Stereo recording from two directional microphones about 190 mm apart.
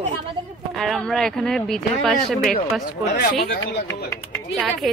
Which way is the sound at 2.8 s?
55° left (ahead or behind).